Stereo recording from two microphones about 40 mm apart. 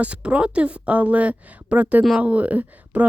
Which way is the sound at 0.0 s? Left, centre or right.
Right.